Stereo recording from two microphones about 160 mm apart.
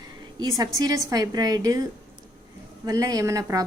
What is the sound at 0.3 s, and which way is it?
A woman's voice, 20° right (ahead or behind).